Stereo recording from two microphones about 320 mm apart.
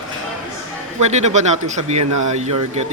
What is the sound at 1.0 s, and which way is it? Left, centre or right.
Speech, right.